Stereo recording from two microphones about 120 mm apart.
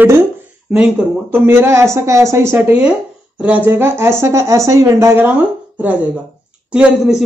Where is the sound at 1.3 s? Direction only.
20° right (ahead or behind).